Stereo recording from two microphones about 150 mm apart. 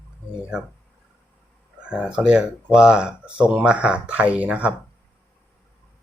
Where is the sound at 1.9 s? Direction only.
5° right (ahead or behind).